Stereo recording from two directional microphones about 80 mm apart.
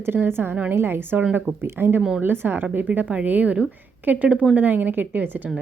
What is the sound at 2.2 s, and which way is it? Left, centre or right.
Speech, right.